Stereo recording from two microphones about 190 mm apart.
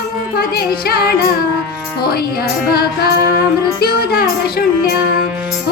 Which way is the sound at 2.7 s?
55° left (ahead or behind).